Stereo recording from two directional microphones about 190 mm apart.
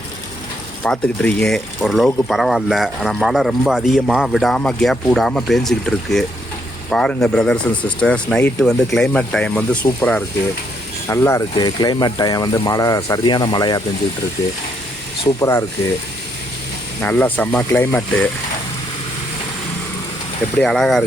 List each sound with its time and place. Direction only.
0.9 s speech: 5° left (ahead or behind)
15.4 s speech: 15° left (ahead or behind)
17.0 s speech: 10° left (ahead or behind)
20.6 s speech: centre (ahead or behind)